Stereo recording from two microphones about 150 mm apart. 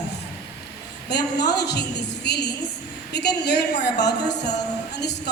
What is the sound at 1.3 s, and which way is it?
A woman's voice, 90° left.